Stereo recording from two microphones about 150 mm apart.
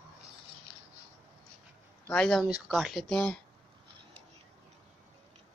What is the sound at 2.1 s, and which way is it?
Speech, 5° left (ahead or behind).